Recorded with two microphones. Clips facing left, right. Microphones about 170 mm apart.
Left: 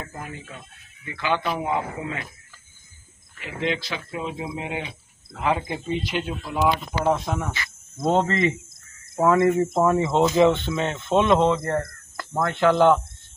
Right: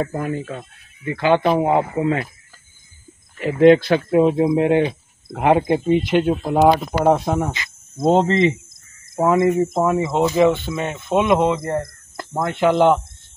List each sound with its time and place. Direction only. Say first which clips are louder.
0.3 s speech: right 13 dB; 45° right (ahead or behind)
1.8 s speech: right 10 dB; 30° right (ahead or behind)
3.3 s speech: right 16 dB; 50° right (ahead or behind)
7.5 s cricket: right 2 dB; 20° right (ahead or behind)
8.1 s speech: right 5 dB; 25° right (ahead or behind)